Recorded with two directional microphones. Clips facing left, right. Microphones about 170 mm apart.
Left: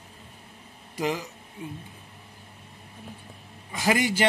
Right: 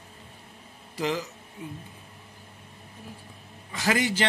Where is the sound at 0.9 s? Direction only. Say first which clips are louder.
Even; 15° left (ahead or behind).